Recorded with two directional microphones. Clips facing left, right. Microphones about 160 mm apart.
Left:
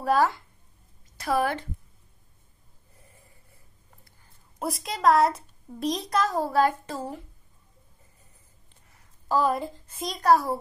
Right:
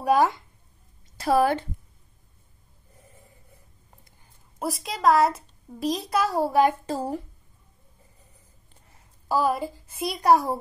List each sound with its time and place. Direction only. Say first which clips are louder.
0.0 s a woman's voice: right 2 dB; 15° right (ahead or behind)
1.1 s a woman's voice: right 5 dB; 30° right (ahead or behind)
4.6 s a child's voice: right 1 dB; centre (ahead or behind)
6.9 s speech: right 5 dB; 35° right (ahead or behind)
9.3 s a woman's voice: even; 5° right (ahead or behind)